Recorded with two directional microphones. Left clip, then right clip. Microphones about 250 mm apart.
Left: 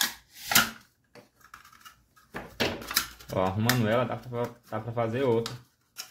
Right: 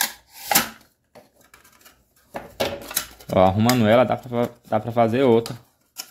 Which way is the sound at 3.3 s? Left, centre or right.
Right.